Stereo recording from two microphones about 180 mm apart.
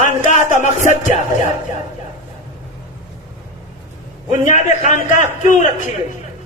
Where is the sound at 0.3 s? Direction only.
45° left (ahead or behind).